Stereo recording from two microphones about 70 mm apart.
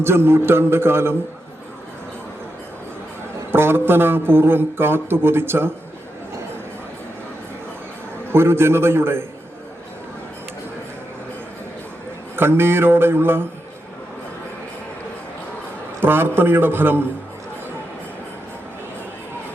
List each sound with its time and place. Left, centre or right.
0.0 s speech: right
3.5 s speech: right
8.3 s speech: right
12.4 s speech: right
16.0 s speech: right